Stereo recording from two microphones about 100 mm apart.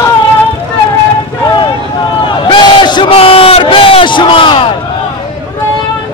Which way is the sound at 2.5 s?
50° left (ahead or behind).